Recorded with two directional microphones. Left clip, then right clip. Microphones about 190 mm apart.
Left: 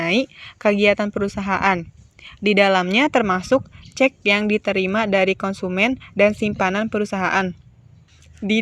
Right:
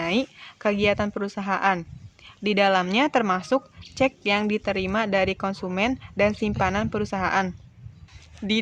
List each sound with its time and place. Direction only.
0.0 s a woman's voice: 25° left (ahead or behind)